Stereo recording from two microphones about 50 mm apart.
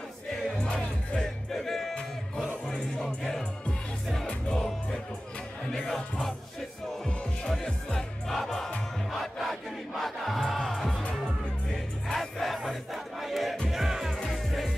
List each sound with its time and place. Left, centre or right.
1.1 s music: centre
2.7 s music: centre
4.6 s music: centre
7.6 s music: centre
10.9 s music: left
11.7 s crowd: centre
13.7 s music: centre
14.1 s music: centre